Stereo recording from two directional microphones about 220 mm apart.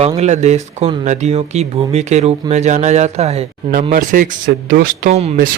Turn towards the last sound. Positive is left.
turn(degrees=-35)  # may be behind; listen again after turning